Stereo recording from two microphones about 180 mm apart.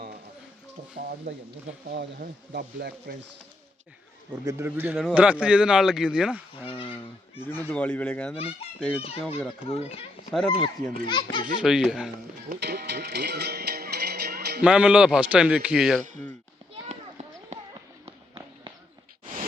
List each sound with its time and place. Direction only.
1.9 s speech: 55° right (ahead or behind)
4.4 s a man's voice: 15° right (ahead or behind)
6.7 s speech: 30° left (ahead or behind)
7.4 s speech: 10° left (ahead or behind)
9.6 s speech: 35° left (ahead or behind)
10.3 s speech: centre (ahead or behind)
11.0 s a child's voice: 25° left (ahead or behind)
11.6 s speech: centre (ahead or behind)
12.5 s music: 60° right (ahead or behind)
14.6 s speech: 5° right (ahead or behind)
16.9 s clip-clop: 35° right (ahead or behind)
18.0 s run: 25° right (ahead or behind)